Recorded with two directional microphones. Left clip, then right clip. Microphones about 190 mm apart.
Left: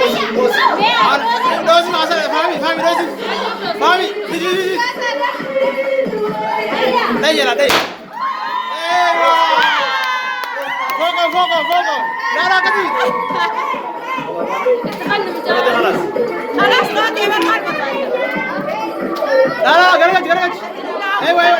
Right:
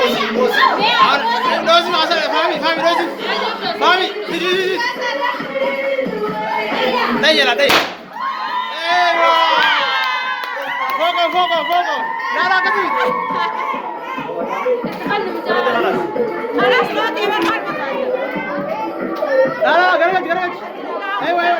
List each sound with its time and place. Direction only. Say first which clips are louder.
0.4 s speech: left 1 dB; 10° left (ahead or behind)
1.5 s chatter: left 1 dB; 5° left (ahead or behind)
7.2 s speech: right 4 dB; 5° left (ahead or behind)
8.9 s a sound: left 1 dB; 10° left (ahead or behind)
9.6 s crowd: left 1 dB; 40° left (ahead or behind)
11.0 s speech: left 1 dB; centre (ahead or behind)
13.0 s speech: left 1 dB; 40° left (ahead or behind)
15.6 s speech: left 3 dB; 10° left (ahead or behind)
16.6 s speech: left 2 dB; 35° left (ahead or behind)
19.6 s a man's voice: left 4 dB; 5° left (ahead or behind)